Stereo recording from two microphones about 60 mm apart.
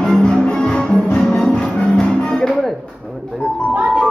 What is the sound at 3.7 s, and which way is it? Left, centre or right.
Music, right.